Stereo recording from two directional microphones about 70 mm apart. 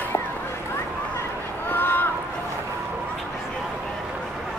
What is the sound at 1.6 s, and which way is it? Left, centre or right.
Run, left.